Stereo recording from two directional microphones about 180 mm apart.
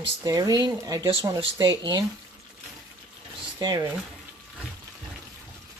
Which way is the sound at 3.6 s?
20° right (ahead or behind).